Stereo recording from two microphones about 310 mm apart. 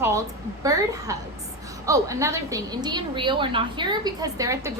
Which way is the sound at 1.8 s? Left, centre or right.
Centre.